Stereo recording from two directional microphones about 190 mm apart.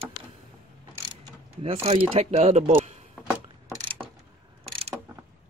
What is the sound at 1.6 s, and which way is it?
Speech, 30° right (ahead or behind).